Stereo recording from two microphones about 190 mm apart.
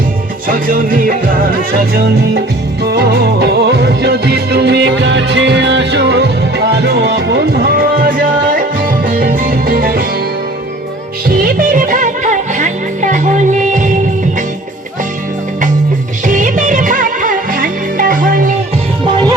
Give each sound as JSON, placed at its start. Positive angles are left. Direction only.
{"t": 0.4, "sound": "music", "side_deg": -45}
{"t": 2.8, "sound": "music", "side_deg": -55}
{"t": 11.3, "sound": "music", "side_deg": -45}
{"t": 16.2, "sound": "music", "side_deg": -40}